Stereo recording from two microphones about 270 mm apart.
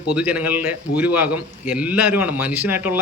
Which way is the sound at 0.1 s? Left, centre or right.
Centre.